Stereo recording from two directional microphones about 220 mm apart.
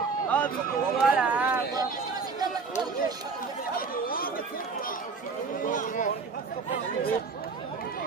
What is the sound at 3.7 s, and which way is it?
Chatter, 40° left (ahead or behind).